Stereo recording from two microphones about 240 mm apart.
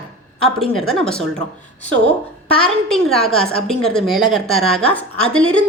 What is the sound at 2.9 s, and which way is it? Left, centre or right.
A woman's voice, centre.